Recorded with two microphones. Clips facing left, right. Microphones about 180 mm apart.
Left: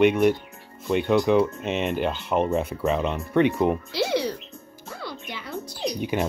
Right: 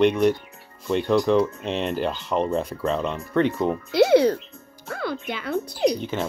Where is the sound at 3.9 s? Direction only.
55° right (ahead or behind).